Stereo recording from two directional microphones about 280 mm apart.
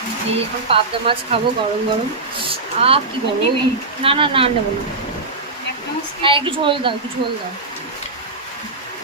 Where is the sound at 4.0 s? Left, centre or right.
Centre.